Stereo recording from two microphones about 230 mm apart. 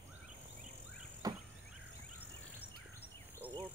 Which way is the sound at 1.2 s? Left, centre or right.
Centre.